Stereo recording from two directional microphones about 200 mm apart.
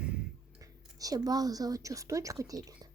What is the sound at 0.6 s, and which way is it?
A woman's voice, 15° right (ahead or behind).